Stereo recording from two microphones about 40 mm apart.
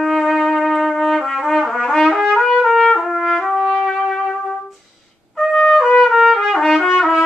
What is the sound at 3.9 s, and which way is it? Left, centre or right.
Trumpet, centre.